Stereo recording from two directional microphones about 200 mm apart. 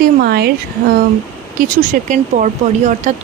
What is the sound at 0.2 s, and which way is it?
Speech, 50° right (ahead or behind).